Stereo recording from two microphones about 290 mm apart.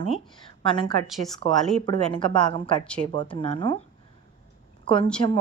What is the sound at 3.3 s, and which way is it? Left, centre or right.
Speech, centre.